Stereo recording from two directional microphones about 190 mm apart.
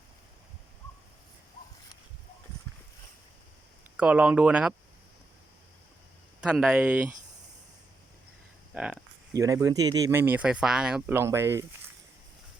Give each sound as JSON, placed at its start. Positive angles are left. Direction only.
{"t": 3.9, "sound": "speech", "side_deg": -5}
{"t": 6.4, "sound": "speech", "side_deg": -5}
{"t": 8.7, "sound": "a sound", "side_deg": -5}
{"t": 9.3, "sound": "speech", "side_deg": -15}